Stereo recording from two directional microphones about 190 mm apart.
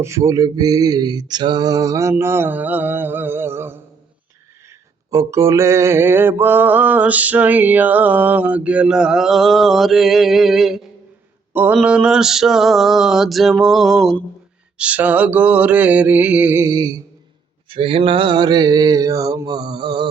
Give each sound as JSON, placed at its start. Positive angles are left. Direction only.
{"t": 0.0, "sound": "mantra", "side_deg": -15}
{"t": 5.1, "sound": "mantra", "side_deg": -15}
{"t": 17.7, "sound": "mantra", "side_deg": -30}